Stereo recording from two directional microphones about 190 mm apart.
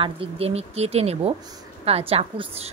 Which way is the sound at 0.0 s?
30° right (ahead or behind).